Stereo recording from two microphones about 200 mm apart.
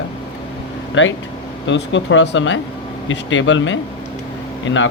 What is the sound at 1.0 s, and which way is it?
Speech, 65° left (ahead or behind).